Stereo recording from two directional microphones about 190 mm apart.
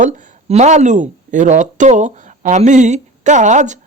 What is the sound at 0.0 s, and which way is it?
Speech, 35° right (ahead or behind).